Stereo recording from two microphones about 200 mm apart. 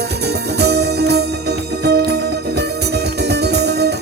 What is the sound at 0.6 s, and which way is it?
Music, 55° right (ahead or behind).